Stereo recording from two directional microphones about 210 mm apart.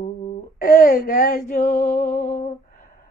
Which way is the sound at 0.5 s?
40° left (ahead or behind).